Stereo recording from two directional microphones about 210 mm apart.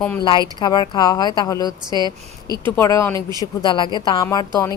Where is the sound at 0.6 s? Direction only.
20° left (ahead or behind).